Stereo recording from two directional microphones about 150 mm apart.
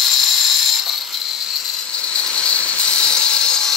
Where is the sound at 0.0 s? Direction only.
Centre (ahead or behind).